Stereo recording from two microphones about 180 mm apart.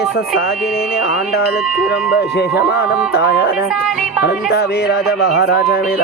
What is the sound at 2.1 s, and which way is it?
Speech, 60° left (ahead or behind).